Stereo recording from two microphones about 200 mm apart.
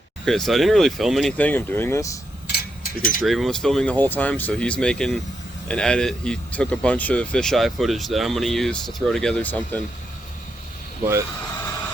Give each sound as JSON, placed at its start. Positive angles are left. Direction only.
{"t": 0.3, "sound": "speech", "side_deg": 0}
{"t": 2.5, "sound": "a sound", "side_deg": 45}
{"t": 3.2, "sound": "speech", "side_deg": 0}